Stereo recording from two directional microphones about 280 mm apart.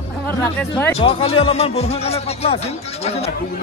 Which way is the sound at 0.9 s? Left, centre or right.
Left.